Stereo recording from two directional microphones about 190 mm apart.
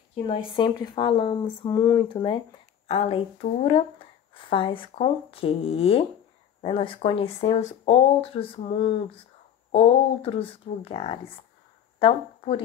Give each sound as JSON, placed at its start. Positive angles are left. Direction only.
{"t": 0.1, "sound": "speech", "side_deg": 30}